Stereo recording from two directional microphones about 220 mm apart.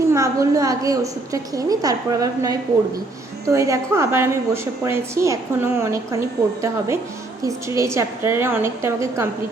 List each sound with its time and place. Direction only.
0.1 s a woman's voice: 15° right (ahead or behind)